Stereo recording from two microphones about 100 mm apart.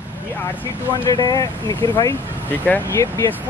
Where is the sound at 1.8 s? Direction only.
35° left (ahead or behind).